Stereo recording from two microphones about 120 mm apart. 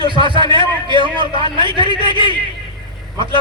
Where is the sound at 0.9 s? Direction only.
45° right (ahead or behind).